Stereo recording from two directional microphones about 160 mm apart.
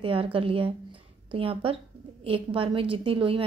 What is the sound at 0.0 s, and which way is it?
A woman's voice, 35° right (ahead or behind).